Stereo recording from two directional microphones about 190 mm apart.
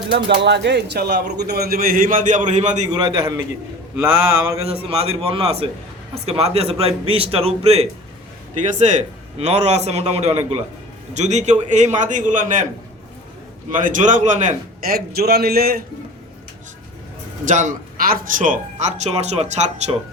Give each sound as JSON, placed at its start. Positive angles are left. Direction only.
{"t": 0.3, "sound": "a man's voice", "side_deg": -70}
{"t": 2.9, "sound": "a man's voice", "side_deg": -25}
{"t": 4.0, "sound": "a sound", "side_deg": -10}
{"t": 4.6, "sound": "speech", "side_deg": -30}
{"t": 13.7, "sound": "a man's voice", "side_deg": -45}
{"t": 17.5, "sound": "speech", "side_deg": -40}